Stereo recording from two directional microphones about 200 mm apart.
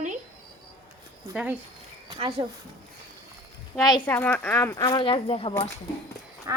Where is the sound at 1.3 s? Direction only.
5° right (ahead or behind).